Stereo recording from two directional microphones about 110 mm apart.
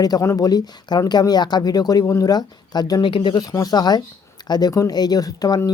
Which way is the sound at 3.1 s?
50° left (ahead or behind).